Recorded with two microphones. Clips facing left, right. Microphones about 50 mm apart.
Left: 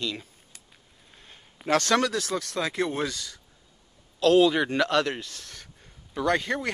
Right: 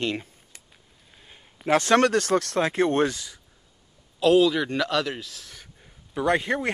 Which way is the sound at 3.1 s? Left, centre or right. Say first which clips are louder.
Even; centre.